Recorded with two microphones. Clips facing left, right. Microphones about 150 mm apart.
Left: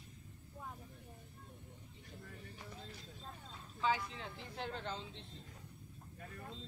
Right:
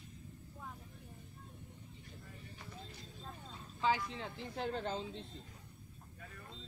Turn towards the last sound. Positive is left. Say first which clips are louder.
# right 5 dB
turn(degrees=-45)  # may be behind; listen again after turning